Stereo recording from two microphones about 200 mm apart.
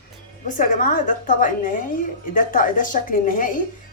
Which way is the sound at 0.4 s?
40° left (ahead or behind).